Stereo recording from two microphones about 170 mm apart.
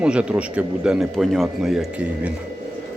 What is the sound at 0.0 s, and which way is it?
A man's voice, 5° right (ahead or behind).